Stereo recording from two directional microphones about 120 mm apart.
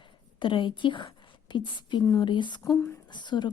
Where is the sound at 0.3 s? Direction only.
45° left (ahead or behind).